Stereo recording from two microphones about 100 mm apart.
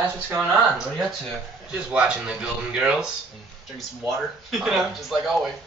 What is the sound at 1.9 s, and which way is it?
Speech, 10° right (ahead or behind).